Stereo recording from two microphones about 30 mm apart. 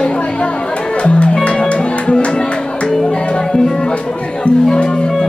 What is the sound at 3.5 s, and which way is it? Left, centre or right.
Music, left.